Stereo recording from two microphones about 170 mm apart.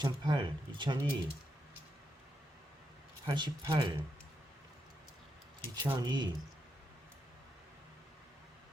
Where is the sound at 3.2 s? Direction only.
25° right (ahead or behind).